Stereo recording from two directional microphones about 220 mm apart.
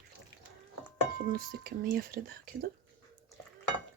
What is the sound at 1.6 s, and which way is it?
Speech, 45° right (ahead or behind).